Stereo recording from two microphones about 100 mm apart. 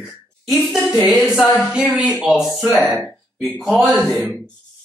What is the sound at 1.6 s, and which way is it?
Speech, 15° right (ahead or behind).